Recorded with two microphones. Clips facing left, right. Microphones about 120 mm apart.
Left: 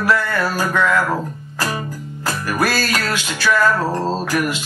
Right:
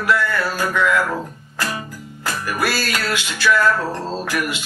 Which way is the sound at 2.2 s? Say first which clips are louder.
Left 2 dB; 40° left (ahead or behind).